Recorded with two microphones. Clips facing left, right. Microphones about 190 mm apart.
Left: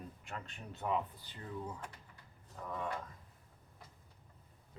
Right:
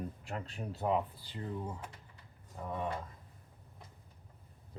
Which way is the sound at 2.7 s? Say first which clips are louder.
Right 3 dB; 25° right (ahead or behind).